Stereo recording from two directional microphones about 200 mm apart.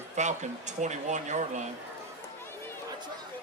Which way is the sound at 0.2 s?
35° right (ahead or behind).